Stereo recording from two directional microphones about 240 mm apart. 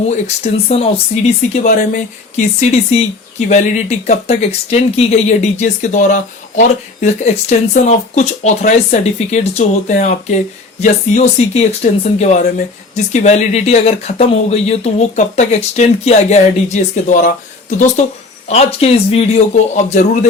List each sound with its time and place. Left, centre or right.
0.4 s speech: left